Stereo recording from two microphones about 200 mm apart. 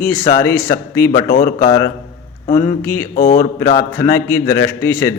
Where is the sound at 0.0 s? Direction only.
10° left (ahead or behind).